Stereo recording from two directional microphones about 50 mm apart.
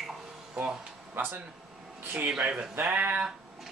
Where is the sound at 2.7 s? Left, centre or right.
Right.